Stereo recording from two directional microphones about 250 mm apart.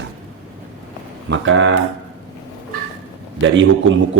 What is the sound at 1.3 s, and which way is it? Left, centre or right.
Speech, right.